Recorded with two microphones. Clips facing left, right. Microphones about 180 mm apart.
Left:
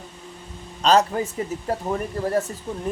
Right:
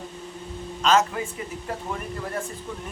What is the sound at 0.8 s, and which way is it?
Speech, 35° left (ahead or behind).